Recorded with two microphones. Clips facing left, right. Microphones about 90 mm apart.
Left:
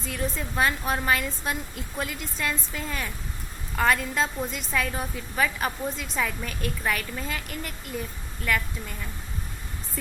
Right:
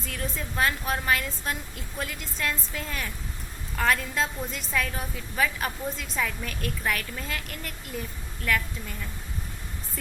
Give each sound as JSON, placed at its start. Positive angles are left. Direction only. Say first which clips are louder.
{"t": 0.0, "sound": "a woman's voice", "louder": "left 3 dB", "side_deg": 0}